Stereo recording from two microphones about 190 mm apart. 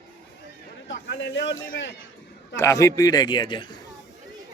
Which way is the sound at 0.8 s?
70° left (ahead or behind).